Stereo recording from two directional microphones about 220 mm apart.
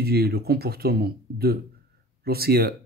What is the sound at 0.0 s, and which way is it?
Speech, 45° right (ahead or behind).